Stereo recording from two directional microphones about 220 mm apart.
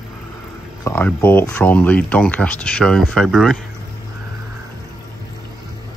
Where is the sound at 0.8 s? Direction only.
10° left (ahead or behind).